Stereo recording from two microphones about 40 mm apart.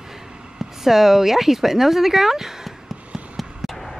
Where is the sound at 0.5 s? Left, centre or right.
Centre.